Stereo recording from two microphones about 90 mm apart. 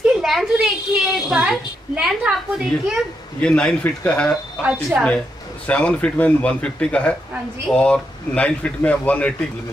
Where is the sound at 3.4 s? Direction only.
10° left (ahead or behind).